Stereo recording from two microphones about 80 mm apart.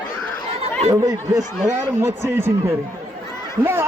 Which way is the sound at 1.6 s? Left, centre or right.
Right.